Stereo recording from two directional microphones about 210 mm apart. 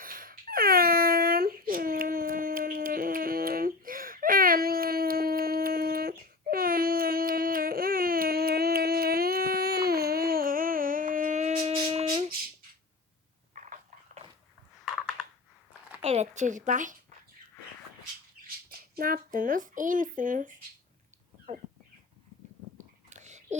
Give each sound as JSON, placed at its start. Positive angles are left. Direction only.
{"t": 0.0, "sound": "wail", "side_deg": -40}
{"t": 13.5, "sound": "biting", "side_deg": -35}
{"t": 16.0, "sound": "speech", "side_deg": -30}
{"t": 18.9, "sound": "speech", "side_deg": -45}
{"t": 22.8, "sound": "whispering", "side_deg": -35}